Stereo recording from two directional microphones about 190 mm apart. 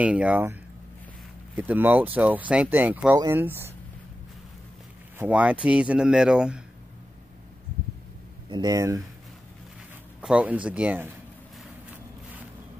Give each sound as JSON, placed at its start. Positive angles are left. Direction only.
{"t": 0.0, "sound": "speech", "side_deg": -5}
{"t": 5.2, "sound": "speech", "side_deg": -5}
{"t": 8.5, "sound": "speech", "side_deg": -20}
{"t": 10.2, "sound": "speech", "side_deg": -5}